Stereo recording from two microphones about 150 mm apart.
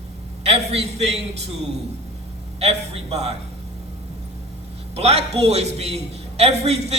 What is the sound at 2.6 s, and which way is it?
Speech, 45° right (ahead or behind).